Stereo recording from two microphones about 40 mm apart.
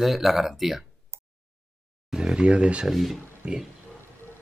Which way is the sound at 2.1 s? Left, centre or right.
Centre.